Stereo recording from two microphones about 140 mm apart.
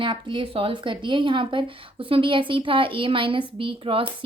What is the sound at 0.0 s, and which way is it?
Speech, 35° right (ahead or behind).